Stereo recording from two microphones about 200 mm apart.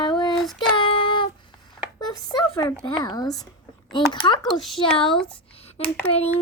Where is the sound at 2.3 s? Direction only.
20° left (ahead or behind).